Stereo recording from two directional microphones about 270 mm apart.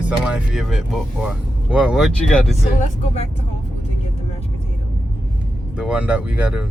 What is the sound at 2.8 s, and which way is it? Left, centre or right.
Speech, left.